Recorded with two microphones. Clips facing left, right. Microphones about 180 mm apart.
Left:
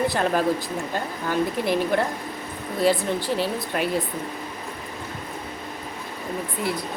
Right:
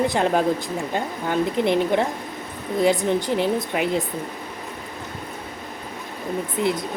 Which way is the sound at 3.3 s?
20° right (ahead or behind).